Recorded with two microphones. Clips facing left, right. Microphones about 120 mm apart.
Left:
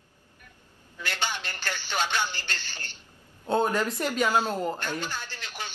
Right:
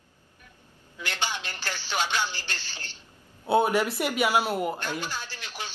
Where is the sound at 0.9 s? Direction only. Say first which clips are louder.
Even; 15° right (ahead or behind).